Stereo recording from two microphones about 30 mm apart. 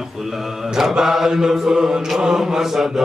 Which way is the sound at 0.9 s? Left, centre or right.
Centre.